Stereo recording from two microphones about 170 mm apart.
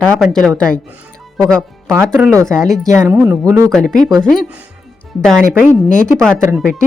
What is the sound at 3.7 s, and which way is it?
Speech, 5° left (ahead or behind).